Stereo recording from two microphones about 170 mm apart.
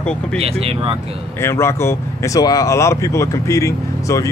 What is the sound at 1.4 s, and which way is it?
Speech, 15° left (ahead or behind).